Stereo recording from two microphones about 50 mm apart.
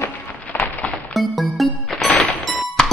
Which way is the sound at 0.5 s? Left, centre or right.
Left.